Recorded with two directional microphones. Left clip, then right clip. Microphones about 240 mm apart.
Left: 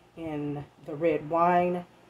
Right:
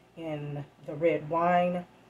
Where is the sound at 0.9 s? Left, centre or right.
Left.